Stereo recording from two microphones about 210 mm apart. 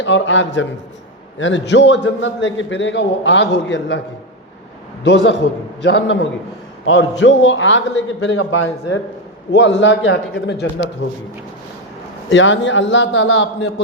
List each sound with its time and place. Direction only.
0.0 s a man's voice: 60° left (ahead or behind)
5.0 s a man's voice: 55° left (ahead or behind)
12.3 s a man's voice: 60° left (ahead or behind)